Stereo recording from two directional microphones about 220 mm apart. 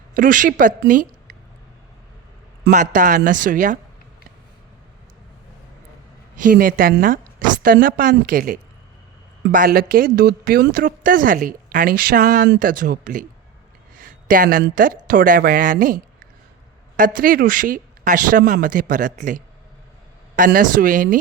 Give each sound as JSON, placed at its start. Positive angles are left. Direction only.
{"t": 0.1, "sound": "a woman's voice", "side_deg": -35}
{"t": 2.6, "sound": "a woman's voice", "side_deg": -35}
{"t": 6.4, "sound": "a woman's voice", "side_deg": -40}
{"t": 13.9, "sound": "a sound", "side_deg": -40}
{"t": 14.8, "sound": "a woman's voice", "side_deg": -40}
{"t": 17.0, "sound": "a woman's voice", "side_deg": -40}